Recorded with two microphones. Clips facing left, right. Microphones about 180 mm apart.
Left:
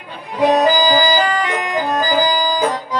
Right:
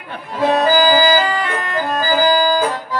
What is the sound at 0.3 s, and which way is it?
Music, 15° left (ahead or behind).